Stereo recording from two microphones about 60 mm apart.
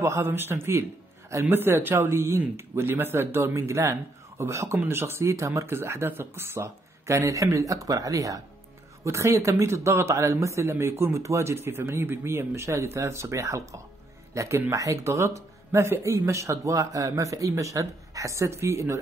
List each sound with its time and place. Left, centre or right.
0.0 s speech: right
4.7 s speech: right
5.3 s speech: right
5.8 s speech: right
9.0 s speech: right